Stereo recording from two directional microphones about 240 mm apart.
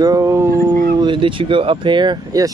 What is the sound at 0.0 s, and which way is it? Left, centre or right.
Dog, centre.